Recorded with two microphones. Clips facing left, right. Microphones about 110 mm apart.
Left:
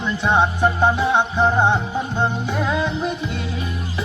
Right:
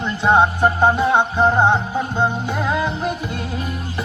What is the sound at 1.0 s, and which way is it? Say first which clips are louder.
Music: right 2 dB; 15° right (ahead or behind).